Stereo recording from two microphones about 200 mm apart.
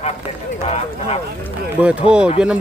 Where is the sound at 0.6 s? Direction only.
30° left (ahead or behind).